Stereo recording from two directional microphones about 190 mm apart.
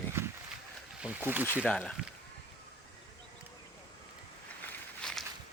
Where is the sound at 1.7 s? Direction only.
5° left (ahead or behind).